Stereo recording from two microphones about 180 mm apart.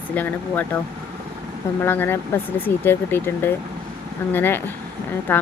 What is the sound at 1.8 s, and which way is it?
Speech, 10° left (ahead or behind).